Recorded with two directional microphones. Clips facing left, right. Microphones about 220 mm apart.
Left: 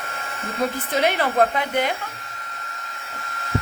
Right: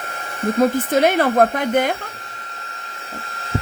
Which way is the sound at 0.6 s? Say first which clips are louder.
Right 6 dB; 45° right (ahead or behind).